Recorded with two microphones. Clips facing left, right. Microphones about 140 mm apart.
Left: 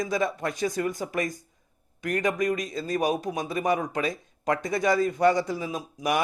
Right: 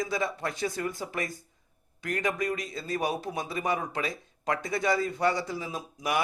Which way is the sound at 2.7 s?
45° left (ahead or behind).